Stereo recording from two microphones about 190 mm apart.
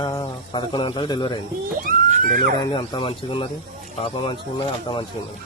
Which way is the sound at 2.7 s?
30° left (ahead or behind).